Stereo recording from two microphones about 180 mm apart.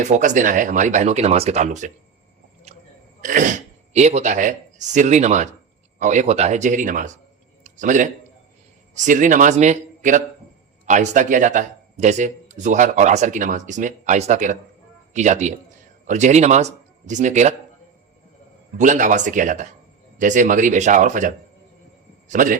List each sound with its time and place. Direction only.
0.0 s speech: 40° right (ahead or behind)
2.7 s a sound: 35° right (ahead or behind)
3.2 s speech: 45° right (ahead or behind)
7.6 s a sound: 45° right (ahead or behind)
9.0 s speech: 45° right (ahead or behind)
18.8 s a man's voice: 45° right (ahead or behind)